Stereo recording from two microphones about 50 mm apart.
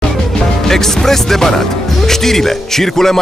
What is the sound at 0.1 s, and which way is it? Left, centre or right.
Speech, centre.